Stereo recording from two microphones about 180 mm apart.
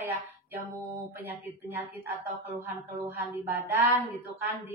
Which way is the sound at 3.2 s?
10° right (ahead or behind).